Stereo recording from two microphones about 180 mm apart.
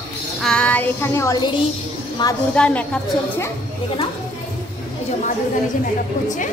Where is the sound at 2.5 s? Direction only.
5° left (ahead or behind).